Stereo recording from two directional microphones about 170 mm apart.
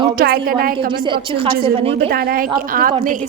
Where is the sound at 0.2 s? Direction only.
60° right (ahead or behind).